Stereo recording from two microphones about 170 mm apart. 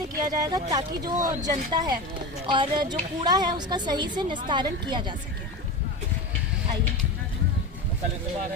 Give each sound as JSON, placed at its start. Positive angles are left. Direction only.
{"t": 0.2, "sound": "a woman's voice", "side_deg": -20}